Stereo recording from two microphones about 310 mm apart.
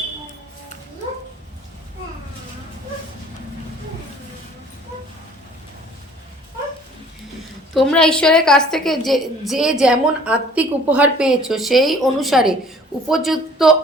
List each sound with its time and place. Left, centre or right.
7.7 s a woman's voice: centre